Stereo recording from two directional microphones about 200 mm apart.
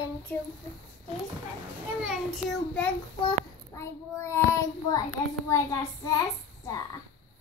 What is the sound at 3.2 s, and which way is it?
Child singing, 15° left (ahead or behind).